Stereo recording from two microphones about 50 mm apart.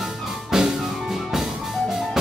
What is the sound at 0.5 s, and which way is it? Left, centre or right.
Music, centre.